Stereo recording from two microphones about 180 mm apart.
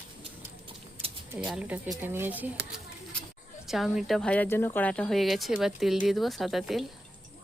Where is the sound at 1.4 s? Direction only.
5° right (ahead or behind).